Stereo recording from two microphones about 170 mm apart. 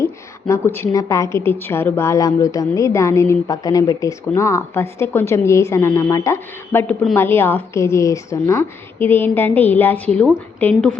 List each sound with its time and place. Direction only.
0.0 s a woman's voice: 15° left (ahead or behind)